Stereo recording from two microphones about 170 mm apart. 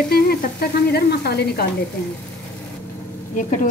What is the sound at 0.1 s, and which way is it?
Sizzle, 65° left (ahead or behind).